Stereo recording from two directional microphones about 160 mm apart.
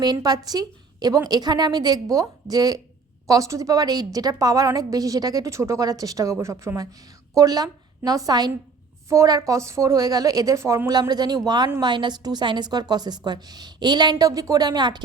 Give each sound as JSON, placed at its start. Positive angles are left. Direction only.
{"t": 0.0, "sound": "a woman's voice", "side_deg": -25}